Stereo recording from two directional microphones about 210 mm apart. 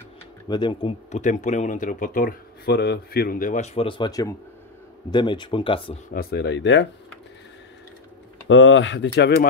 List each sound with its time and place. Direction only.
0.5 s speech: 20° left (ahead or behind)
6.1 s speech: 55° left (ahead or behind)
8.5 s speech: 65° left (ahead or behind)